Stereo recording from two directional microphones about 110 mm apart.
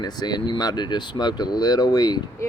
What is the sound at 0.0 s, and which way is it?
Speech, 40° left (ahead or behind).